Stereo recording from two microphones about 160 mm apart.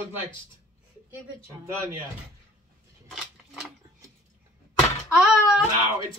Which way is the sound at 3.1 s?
Centre (ahead or behind).